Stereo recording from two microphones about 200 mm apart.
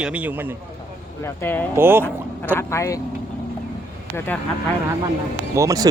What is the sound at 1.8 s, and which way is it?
Speech, 10° right (ahead or behind).